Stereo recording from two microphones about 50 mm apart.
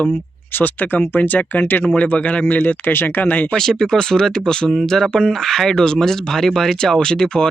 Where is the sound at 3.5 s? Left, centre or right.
Centre.